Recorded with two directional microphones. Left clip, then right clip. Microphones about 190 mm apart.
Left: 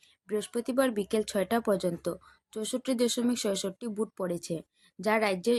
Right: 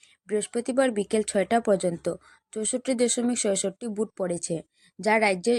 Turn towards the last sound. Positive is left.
turn(degrees=-15)  # may be behind; listen again after turning